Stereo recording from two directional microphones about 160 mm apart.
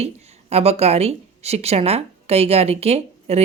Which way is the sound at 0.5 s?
40° right (ahead or behind).